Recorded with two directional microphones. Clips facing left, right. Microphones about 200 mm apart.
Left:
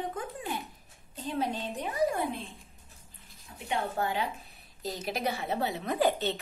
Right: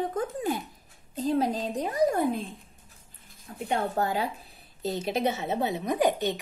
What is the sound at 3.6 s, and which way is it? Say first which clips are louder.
A woman's voice: right 4 dB; 40° right (ahead or behind).